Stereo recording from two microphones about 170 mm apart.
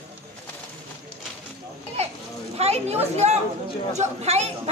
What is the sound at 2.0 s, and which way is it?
Children playing, 40° right (ahead or behind).